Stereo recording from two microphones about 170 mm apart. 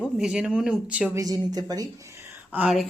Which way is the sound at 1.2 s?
20° right (ahead or behind).